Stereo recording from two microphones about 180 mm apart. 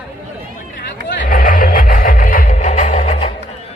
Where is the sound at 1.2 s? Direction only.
50° left (ahead or behind).